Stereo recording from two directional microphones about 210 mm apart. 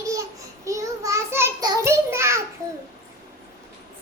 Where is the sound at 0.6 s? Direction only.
15° right (ahead or behind).